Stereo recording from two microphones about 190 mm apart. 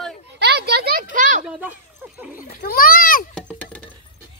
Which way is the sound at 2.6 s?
50° left (ahead or behind).